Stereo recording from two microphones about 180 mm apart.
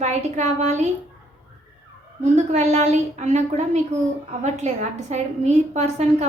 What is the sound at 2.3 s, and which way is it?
A woman's voice, 40° right (ahead or behind).